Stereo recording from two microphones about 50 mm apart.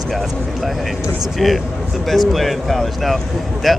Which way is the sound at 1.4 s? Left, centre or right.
Centre.